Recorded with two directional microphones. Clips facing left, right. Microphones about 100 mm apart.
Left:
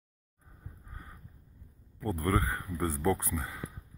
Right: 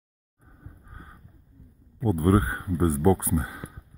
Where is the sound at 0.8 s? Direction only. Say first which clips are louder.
Right 3 dB; 25° right (ahead or behind).